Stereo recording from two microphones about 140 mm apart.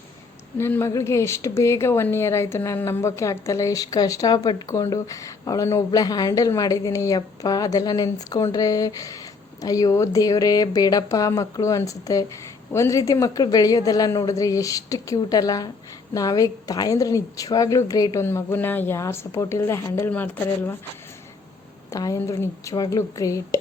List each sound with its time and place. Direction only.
0.6 s a woman's voice: 20° left (ahead or behind)
21.9 s a woman's voice: 25° left (ahead or behind)